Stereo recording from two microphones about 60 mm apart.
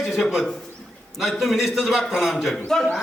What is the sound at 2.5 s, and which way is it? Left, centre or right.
Speech, centre.